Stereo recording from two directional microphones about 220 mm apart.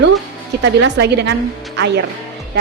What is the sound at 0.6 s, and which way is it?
Speech, 50° right (ahead or behind).